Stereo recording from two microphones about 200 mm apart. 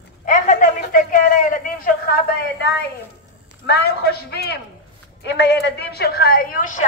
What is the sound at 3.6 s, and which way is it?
A man's voice, 50° left (ahead or behind).